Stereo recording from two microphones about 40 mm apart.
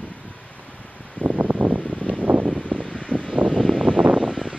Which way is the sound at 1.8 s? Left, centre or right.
Left.